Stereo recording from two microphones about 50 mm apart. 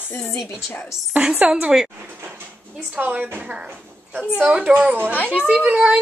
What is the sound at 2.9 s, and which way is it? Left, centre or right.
Speech, right.